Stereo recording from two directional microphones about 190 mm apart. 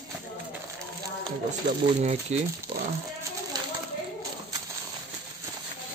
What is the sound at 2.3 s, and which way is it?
Speech, 35° right (ahead or behind).